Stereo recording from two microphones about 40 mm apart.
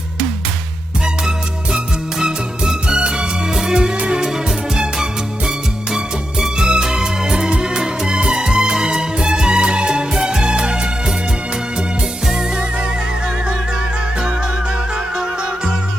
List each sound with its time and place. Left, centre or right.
2.1 s music: centre
2.8 s music: right
3.5 s music: centre
3.9 s music: right
6.4 s music: centre